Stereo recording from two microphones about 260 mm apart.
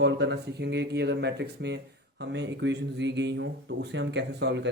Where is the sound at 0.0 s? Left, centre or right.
Right.